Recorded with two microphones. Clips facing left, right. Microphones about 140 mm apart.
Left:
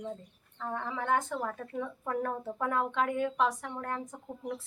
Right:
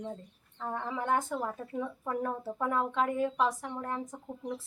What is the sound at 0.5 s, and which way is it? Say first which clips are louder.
A woman's voice: right 1 dB; 15° right (ahead or behind).